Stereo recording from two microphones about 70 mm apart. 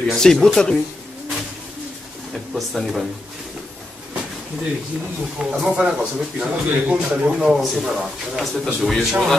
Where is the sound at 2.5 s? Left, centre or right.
Centre.